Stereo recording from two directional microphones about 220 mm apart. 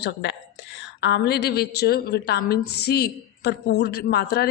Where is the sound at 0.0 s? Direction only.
50° left (ahead or behind).